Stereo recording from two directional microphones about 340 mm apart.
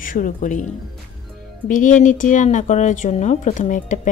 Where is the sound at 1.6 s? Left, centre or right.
Left.